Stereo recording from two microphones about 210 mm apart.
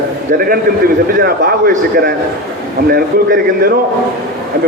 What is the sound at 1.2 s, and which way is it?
A man's voice, 45° right (ahead or behind).